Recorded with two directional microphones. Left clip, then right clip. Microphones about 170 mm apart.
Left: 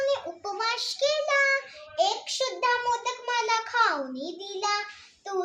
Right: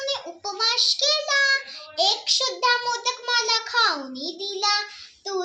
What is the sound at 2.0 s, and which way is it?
A child's voice, 25° left (ahead or behind).